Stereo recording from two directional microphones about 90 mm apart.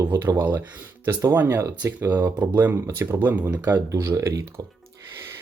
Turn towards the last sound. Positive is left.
turn(degrees=-35)  # may be behind; listen again after turning